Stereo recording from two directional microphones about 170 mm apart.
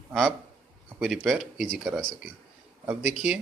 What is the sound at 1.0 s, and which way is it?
Speech, centre (ahead or behind).